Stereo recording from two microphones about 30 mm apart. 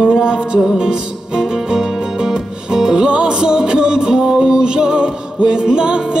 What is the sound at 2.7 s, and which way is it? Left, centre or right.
Music, centre.